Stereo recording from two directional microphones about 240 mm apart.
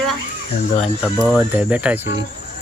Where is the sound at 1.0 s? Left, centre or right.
Centre.